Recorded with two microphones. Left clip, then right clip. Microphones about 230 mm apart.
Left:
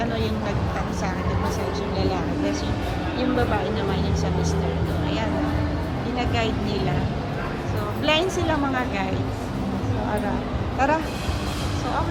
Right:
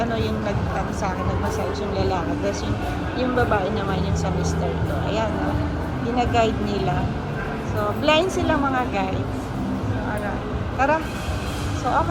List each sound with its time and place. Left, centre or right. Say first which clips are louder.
2.0 s a woman's voice: right 2 dB; centre
6.1 s speech: right 6 dB; centre
8.0 s a woman's voice: right 2 dB; centre
10.8 s speech: right 1 dB; centre